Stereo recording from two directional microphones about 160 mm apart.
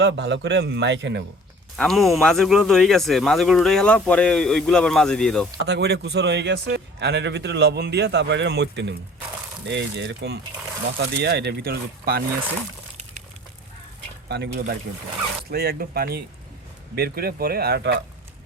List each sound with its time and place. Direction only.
0.0 s speech: 90° right
1.7 s speech: centre (ahead or behind)
5.6 s speech: 90° right; by 12.2 s 70° right (ahead or behind)
14.3 s speech: 90° right
15.4 s speech: 75° right (ahead or behind)